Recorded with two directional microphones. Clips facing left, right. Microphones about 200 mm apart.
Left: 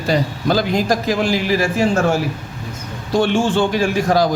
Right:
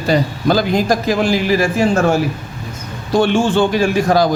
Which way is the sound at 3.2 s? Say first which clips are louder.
Right 2 dB; 60° right (ahead or behind).